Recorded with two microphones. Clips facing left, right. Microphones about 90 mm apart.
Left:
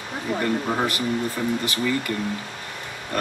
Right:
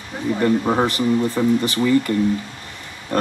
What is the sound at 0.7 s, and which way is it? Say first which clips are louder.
Speech: right 5 dB; 30° right (ahead or behind).